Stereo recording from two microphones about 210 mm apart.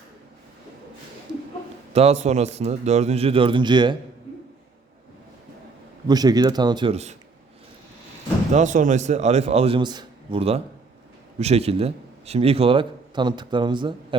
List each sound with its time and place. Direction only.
1.9 s a man's voice: 30° right (ahead or behind)
6.1 s a man's voice: 20° right (ahead or behind)
8.5 s a man's voice: 35° right (ahead or behind)